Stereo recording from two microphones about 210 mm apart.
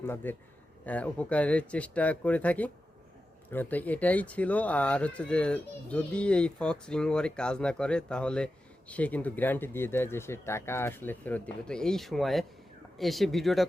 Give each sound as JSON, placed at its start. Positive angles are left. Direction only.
{"t": 0.0, "sound": "speech", "side_deg": 10}